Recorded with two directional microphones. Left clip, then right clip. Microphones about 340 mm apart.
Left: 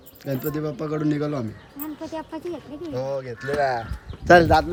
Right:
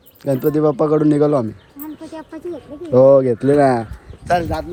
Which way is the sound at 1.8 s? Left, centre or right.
Centre.